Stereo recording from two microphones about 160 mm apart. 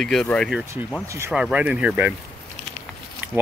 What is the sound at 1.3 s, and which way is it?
Speech, 5° right (ahead or behind).